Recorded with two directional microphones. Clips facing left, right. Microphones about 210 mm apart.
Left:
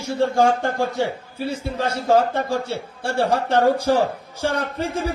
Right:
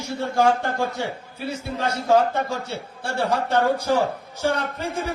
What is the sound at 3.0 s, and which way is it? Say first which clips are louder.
Speech: left 3 dB; 55° left (ahead or behind).